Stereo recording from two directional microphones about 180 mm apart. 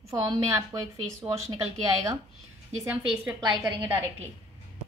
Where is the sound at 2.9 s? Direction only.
10° right (ahead or behind).